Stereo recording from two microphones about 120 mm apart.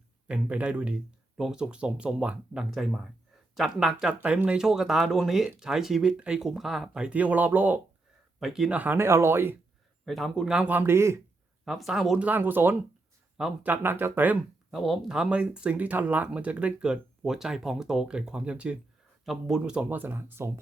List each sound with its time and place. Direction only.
0.3 s speech: 10° right (ahead or behind)
8.4 s speech: 5° right (ahead or behind); by 9.6 s 20° right (ahead or behind)
10.1 s speech: centre (ahead or behind); by 11.2 s 20° right (ahead or behind)
11.6 s speech: centre (ahead or behind)
12.2 s speech: 15° right (ahead or behind)
13.3 s speech: 5° right (ahead or behind)
13.7 s speech: 15° right (ahead or behind)
14.7 s speech: centre (ahead or behind)
19.8 s speech: 15° right (ahead or behind)